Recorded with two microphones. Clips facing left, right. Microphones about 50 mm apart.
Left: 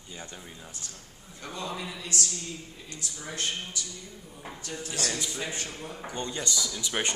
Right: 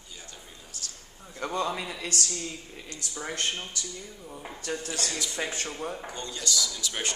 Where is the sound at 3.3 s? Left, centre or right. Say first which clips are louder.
Right 2 dB; right.